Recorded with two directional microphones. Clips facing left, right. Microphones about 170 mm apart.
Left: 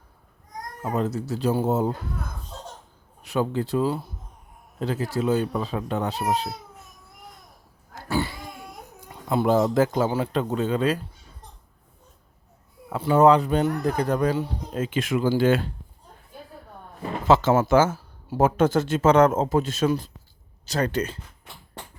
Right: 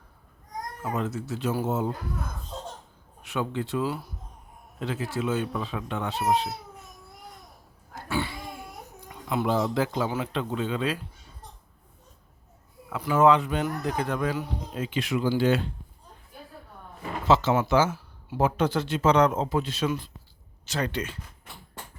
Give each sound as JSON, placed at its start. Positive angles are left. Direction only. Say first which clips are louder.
{"t": 0.8, "sound": "speech", "louder": "left 5 dB", "side_deg": 35}
{"t": 3.2, "sound": "speech", "louder": "left 5 dB", "side_deg": 35}
{"t": 8.0, "sound": "cat", "louder": "left 4 dB", "side_deg": 40}
{"t": 9.0, "sound": "a sound", "louder": "left 4 dB", "side_deg": 30}
{"t": 9.5, "sound": "speech", "louder": "left 6 dB", "side_deg": 45}
{"t": 12.9, "sound": "speech", "louder": "left 3 dB", "side_deg": 35}
{"t": 14.7, "sound": "speech", "louder": "left 3 dB", "side_deg": 45}
{"t": 17.2, "sound": "speech", "louder": "left 4 dB", "side_deg": 50}